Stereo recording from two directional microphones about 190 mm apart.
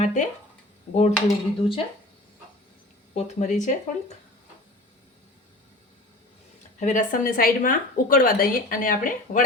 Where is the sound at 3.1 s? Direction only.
40° left (ahead or behind).